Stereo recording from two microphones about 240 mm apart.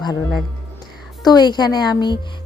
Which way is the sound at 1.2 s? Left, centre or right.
Centre.